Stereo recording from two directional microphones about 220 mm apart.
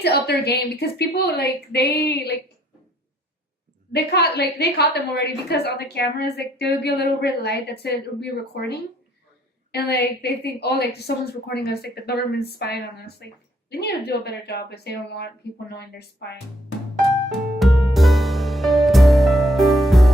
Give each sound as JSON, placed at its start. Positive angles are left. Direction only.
{"t": 0.0, "sound": "a woman's voice", "side_deg": 45}
{"t": 3.9, "sound": "a woman's voice", "side_deg": 45}
{"t": 17.6, "sound": "music", "side_deg": 0}